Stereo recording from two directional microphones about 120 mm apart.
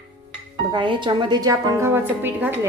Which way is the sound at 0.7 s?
40° right (ahead or behind).